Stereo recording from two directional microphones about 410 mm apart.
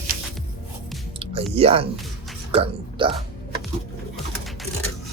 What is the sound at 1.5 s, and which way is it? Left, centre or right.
Speech, centre.